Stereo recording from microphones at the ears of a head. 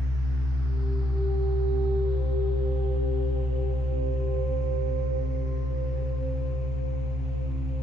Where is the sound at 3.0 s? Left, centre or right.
Left.